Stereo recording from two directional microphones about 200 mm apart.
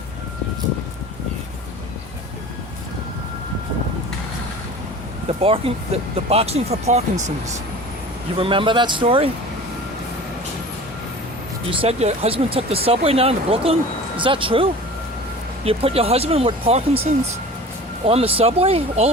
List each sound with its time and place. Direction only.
5.4 s speech: 30° right (ahead or behind)
8.4 s speech: 25° right (ahead or behind)
11.8 s speech: 30° right (ahead or behind)